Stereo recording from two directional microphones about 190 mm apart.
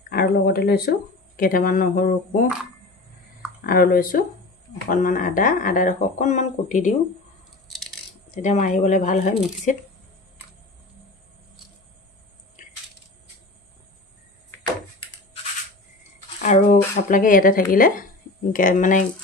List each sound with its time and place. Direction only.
0.1 s speech: 55° left (ahead or behind)
3.6 s speech: 50° left (ahead or behind)
8.3 s speech: 40° left (ahead or behind)
16.4 s speech: 45° left (ahead or behind)